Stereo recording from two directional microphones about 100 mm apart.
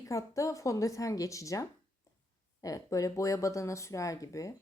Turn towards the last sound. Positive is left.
turn(degrees=35)  # may be behind; listen again after turning